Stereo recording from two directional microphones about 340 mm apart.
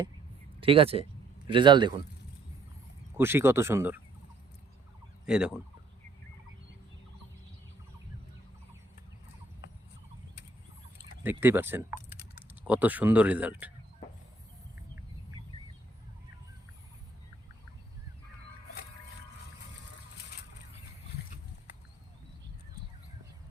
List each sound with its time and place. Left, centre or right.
0.6 s speech: centre
3.2 s speech: centre
5.2 s fowl: centre
10.9 s speech: centre